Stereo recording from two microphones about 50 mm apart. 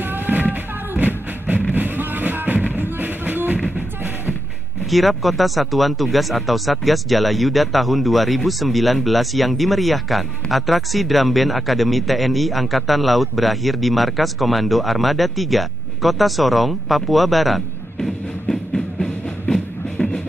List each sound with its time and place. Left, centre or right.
0.5 s music: right
4.9 s speech: centre
18.5 s music: centre